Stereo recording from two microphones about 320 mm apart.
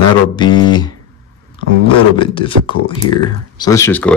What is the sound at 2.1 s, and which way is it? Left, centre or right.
Speech, centre.